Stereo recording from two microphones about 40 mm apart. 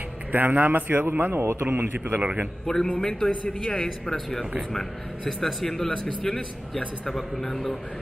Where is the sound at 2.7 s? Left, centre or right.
Centre.